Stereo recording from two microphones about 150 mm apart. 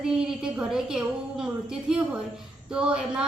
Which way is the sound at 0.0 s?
5° right (ahead or behind).